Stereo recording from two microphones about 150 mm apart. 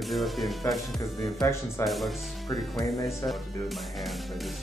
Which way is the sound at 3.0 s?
Centre (ahead or behind).